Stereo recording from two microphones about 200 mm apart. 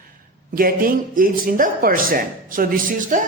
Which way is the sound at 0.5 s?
45° right (ahead or behind).